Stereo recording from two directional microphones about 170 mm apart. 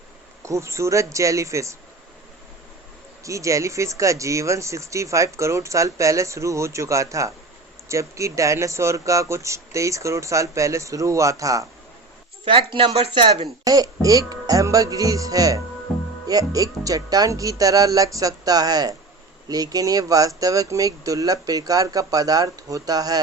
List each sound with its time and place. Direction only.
0.4 s speech: 15° right (ahead or behind)
3.2 s speech: 20° right (ahead or behind)
12.5 s speech: 30° right (ahead or behind)